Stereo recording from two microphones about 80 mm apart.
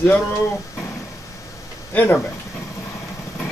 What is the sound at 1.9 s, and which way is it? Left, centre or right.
Speech, left.